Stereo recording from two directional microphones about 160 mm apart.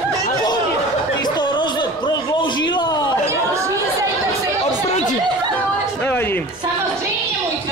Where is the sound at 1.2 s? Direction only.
25° left (ahead or behind).